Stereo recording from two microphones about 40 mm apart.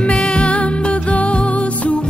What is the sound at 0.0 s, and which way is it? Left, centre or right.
Music, left.